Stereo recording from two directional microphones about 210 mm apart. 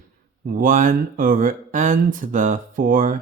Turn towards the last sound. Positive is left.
turn(degrees=-40)  # may be behind; listen again after turning